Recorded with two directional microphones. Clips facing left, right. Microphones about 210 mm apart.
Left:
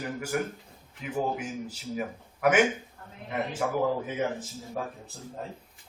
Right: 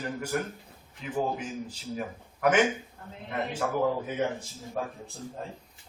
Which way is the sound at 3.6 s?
10° left (ahead or behind).